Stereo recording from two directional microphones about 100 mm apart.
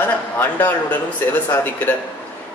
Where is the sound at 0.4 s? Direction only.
15° left (ahead or behind).